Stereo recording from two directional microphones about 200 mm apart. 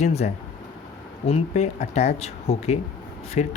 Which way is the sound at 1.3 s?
35° left (ahead or behind).